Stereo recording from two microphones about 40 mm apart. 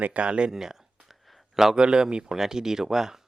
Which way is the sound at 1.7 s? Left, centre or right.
Right.